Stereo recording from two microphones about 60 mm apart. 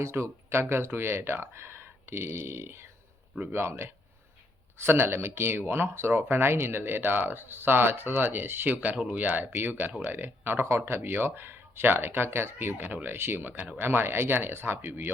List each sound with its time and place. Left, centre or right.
0.0 s speech: right